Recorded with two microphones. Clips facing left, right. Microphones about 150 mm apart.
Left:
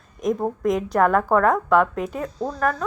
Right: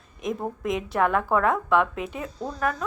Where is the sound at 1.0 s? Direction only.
40° left (ahead or behind).